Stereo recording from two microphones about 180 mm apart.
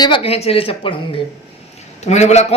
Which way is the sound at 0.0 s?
30° left (ahead or behind).